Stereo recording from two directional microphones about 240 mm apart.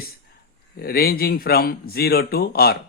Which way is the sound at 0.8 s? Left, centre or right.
Left.